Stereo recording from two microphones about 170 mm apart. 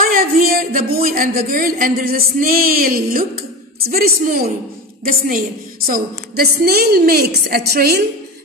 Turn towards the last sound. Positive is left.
turn(degrees=-70)  # may be behind; listen again after turning